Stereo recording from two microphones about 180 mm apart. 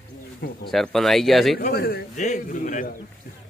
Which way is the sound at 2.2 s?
45° left (ahead or behind).